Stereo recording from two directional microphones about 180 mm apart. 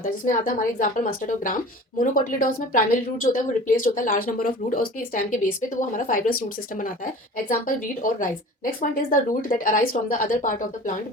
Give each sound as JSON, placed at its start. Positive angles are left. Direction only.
{"t": 0.0, "sound": "a woman's voice", "side_deg": 50}